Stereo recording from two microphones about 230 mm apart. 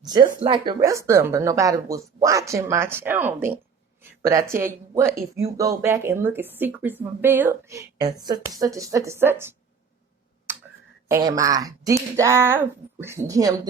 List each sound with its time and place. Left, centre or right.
0.0 s speech: centre
11.1 s speech: centre